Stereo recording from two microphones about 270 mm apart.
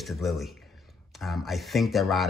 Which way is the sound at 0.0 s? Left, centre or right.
Centre.